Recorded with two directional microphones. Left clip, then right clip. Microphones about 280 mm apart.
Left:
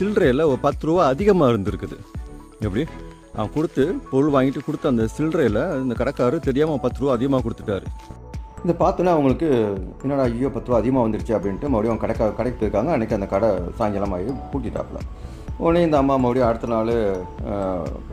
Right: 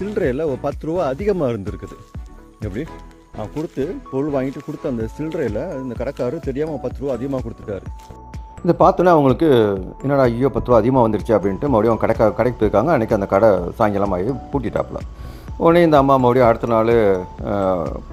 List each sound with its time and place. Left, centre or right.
0.0 s speech: centre
8.6 s speech: centre